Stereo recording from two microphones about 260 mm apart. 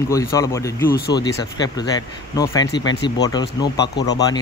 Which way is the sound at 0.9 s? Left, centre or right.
Left.